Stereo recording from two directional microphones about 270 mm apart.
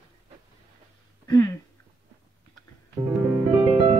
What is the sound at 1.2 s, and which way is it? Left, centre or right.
Speech, centre.